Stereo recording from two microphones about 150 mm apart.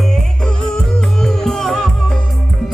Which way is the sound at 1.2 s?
Centre (ahead or behind).